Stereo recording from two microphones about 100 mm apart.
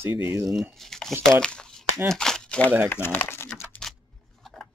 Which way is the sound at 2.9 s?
20° left (ahead or behind).